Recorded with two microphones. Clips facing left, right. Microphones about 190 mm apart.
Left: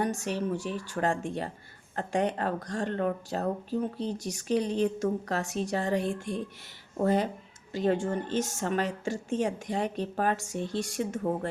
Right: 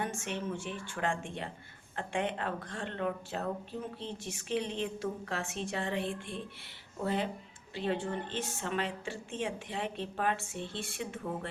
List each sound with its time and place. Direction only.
0.0 s a woman's voice: 40° left (ahead or behind)